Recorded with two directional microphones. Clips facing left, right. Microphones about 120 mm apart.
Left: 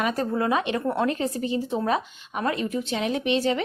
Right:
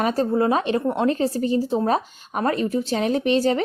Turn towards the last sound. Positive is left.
turn(degrees=-40)  # may be behind; listen again after turning